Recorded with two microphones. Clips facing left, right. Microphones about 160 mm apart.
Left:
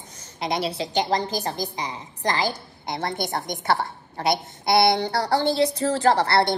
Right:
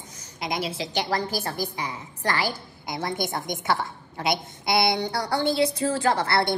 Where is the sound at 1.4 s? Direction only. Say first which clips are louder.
Left 1 dB; 20° left (ahead or behind).